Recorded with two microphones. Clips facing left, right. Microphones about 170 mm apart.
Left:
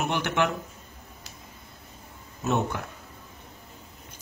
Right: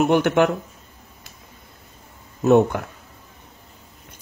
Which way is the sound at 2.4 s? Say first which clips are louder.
Right 12 dB; 55° right (ahead or behind).